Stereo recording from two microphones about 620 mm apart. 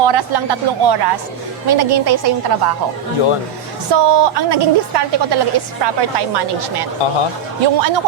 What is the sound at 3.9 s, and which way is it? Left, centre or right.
A woman's voice, right.